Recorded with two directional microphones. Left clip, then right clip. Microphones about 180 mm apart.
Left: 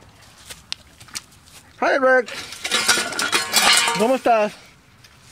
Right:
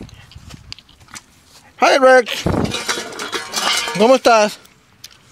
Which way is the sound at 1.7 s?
35° right (ahead or behind).